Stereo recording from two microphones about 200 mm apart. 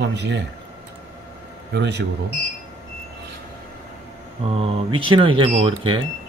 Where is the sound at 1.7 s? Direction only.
55° right (ahead or behind).